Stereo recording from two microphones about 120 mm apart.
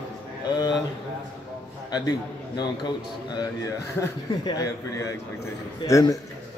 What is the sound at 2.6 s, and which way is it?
Speech, 35° left (ahead or behind).